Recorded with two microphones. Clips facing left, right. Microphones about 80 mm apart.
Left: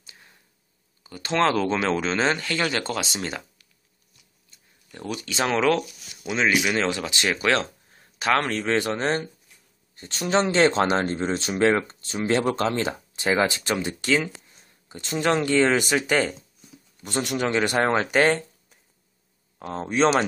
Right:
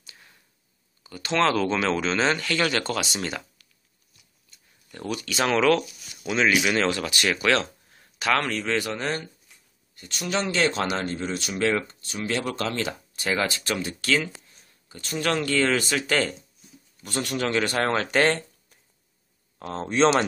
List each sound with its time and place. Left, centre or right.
0.0 s a sound: left
1.0 s speech: left
4.9 s speech: centre